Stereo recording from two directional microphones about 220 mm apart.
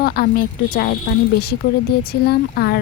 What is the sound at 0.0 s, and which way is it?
Speech, 45° left (ahead or behind).